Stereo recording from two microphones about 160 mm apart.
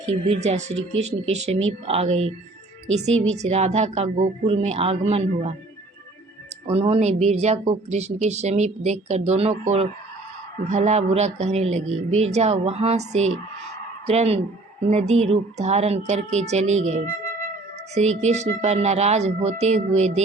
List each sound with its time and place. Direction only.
0.1 s a woman's voice: 45° right (ahead or behind)
3.3 s speech: 45° right (ahead or behind)
6.7 s a woman's voice: 40° right (ahead or behind)